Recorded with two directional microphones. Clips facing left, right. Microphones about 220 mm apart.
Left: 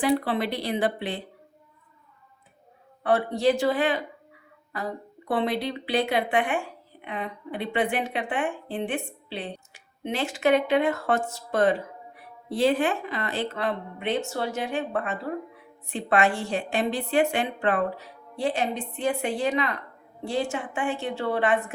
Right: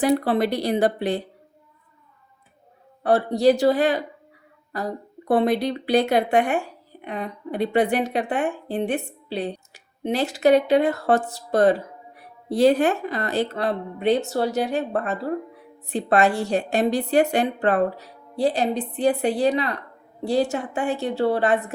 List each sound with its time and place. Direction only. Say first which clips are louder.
0.0 s speech: right 4 dB; 40° right (ahead or behind)
3.0 s speech: right 4 dB; 35° right (ahead or behind)